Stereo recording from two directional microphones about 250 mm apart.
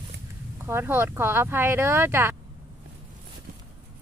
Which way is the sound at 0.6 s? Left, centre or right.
Centre.